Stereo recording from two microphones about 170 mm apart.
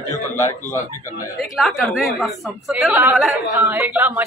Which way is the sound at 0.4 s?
15° left (ahead or behind).